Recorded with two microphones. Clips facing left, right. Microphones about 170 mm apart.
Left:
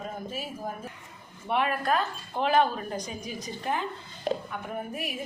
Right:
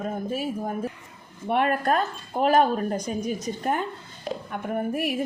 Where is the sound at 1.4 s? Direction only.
45° right (ahead or behind).